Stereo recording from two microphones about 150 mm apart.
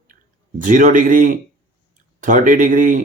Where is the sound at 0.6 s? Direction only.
60° right (ahead or behind).